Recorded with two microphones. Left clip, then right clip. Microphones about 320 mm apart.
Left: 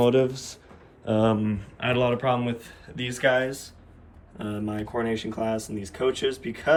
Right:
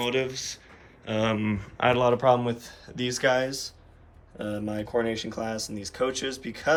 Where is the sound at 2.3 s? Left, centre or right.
Centre.